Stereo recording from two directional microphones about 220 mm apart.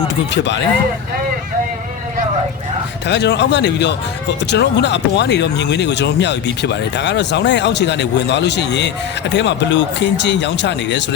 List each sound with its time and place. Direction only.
0.3 s speech: 55° left (ahead or behind)
3.1 s speech: 50° left (ahead or behind)